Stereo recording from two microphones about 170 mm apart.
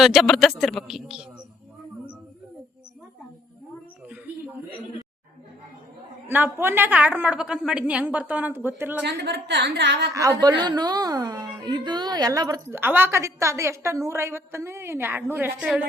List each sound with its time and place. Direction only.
0.0 s speech: centre (ahead or behind)
6.2 s a woman's voice: 10° right (ahead or behind)
9.0 s a woman's voice: 80° right
10.6 s a woman's voice: 25° right (ahead or behind); by 15.9 s 5° right (ahead or behind)